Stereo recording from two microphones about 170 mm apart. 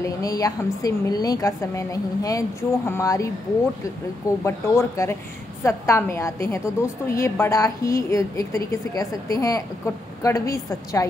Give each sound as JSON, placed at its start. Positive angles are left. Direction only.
{"t": 0.0, "sound": "a woman's voice", "side_deg": 20}
{"t": 4.5, "sound": "a woman's voice", "side_deg": 15}